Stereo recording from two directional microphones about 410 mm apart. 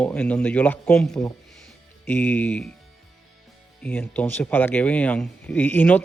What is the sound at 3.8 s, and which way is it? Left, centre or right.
Speech, centre.